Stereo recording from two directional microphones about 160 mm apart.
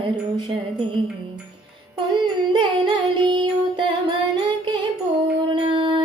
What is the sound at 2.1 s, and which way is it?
Music, 30° right (ahead or behind).